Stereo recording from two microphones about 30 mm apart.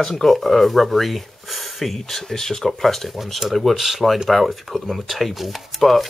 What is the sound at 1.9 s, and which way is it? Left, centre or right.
Speech, centre.